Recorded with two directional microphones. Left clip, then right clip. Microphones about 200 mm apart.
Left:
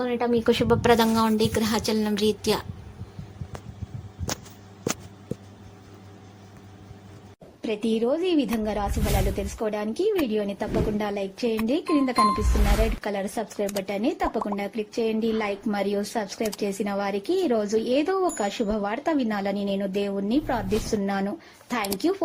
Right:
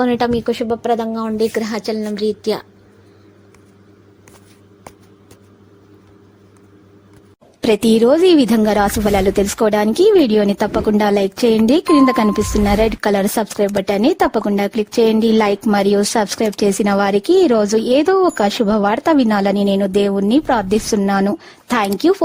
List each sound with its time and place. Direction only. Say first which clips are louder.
0.0 s speech: right 10 dB; 45° right (ahead or behind)
0.4 s speech: right 2 dB; 5° right (ahead or behind)
1.4 s a woman's voice: right 6 dB; 20° right (ahead or behind)
7.6 s speech: right 13 dB; 60° right (ahead or behind)